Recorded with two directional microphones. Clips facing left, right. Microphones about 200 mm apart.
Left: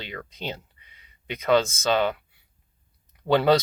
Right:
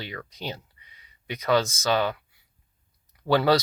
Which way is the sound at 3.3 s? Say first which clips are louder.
Left 1 dB; 25° left (ahead or behind).